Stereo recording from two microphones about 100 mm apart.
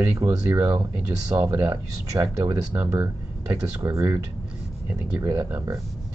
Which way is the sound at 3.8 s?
35° right (ahead or behind).